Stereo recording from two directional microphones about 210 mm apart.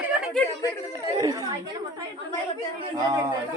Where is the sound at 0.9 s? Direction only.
15° right (ahead or behind).